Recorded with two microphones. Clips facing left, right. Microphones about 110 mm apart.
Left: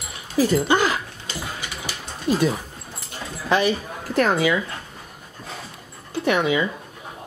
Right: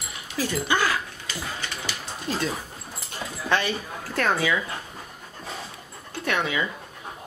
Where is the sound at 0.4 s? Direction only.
20° left (ahead or behind).